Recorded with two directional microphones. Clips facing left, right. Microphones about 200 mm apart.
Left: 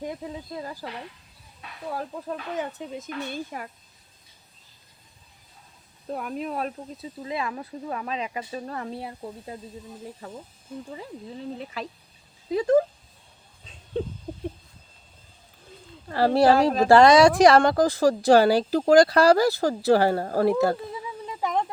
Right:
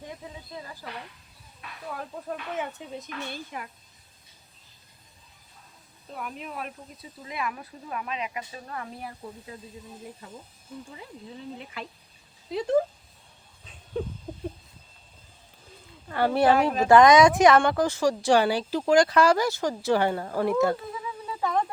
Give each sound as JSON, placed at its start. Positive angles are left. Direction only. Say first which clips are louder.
{"t": 0.6, "sound": "speech", "louder": "left 7 dB", "side_deg": 40}
{"t": 1.9, "sound": "speech", "louder": "left 3 dB", "side_deg": 35}
{"t": 6.1, "sound": "speech", "louder": "left 7 dB", "side_deg": 45}
{"t": 11.5, "sound": "speech", "louder": "left 5 dB", "side_deg": 35}
{"t": 16.0, "sound": "speech", "louder": "left 3 dB", "side_deg": 35}
{"t": 21.2, "sound": "a sound", "louder": "even", "side_deg": 15}